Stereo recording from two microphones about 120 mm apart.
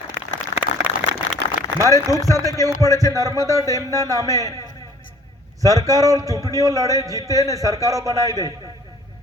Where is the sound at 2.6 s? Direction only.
30° right (ahead or behind).